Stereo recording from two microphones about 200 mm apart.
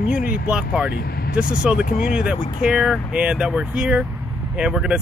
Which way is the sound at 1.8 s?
45° left (ahead or behind).